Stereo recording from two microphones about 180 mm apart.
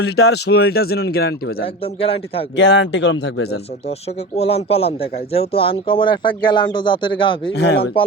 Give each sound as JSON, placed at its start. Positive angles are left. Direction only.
{"t": 0.0, "sound": "speech", "side_deg": 65}
{"t": 1.6, "sound": "a man's voice", "side_deg": 30}
{"t": 2.6, "sound": "speech", "side_deg": 90}
{"t": 4.4, "sound": "a man's voice", "side_deg": 35}
{"t": 7.5, "sound": "speech", "side_deg": 70}